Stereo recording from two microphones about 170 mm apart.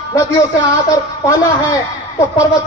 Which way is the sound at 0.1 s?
15° left (ahead or behind).